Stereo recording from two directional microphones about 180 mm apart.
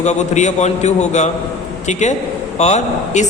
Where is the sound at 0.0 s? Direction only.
40° left (ahead or behind).